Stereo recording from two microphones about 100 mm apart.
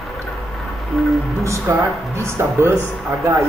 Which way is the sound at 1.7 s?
25° right (ahead or behind).